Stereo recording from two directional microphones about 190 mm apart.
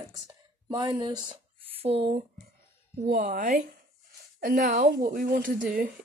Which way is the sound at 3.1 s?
50° right (ahead or behind).